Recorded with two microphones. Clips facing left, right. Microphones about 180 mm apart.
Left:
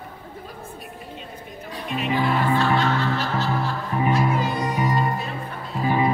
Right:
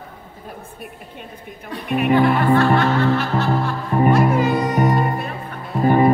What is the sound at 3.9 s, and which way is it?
Music, 50° right (ahead or behind).